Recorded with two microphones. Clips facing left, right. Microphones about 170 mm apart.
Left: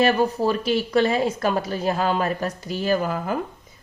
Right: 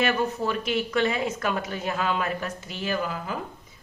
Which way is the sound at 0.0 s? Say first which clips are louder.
Left 6 dB; 35° left (ahead or behind).